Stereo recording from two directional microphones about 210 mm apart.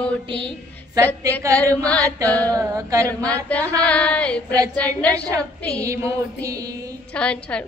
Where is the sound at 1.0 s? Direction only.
15° right (ahead or behind).